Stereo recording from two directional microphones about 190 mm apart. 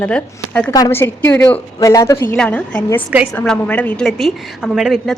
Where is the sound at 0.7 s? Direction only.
15° left (ahead or behind).